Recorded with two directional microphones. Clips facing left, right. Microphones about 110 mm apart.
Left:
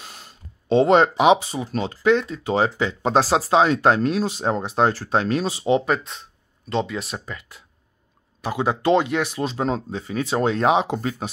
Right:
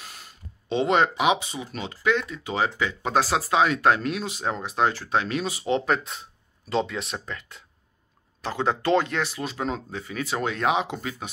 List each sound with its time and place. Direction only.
0.7 s speech: 35° left (ahead or behind)
5.9 s speech: centre (ahead or behind)
9.4 s speech: 30° left (ahead or behind)